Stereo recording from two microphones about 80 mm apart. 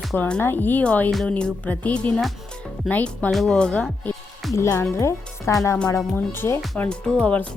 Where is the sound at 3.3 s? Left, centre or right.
Centre.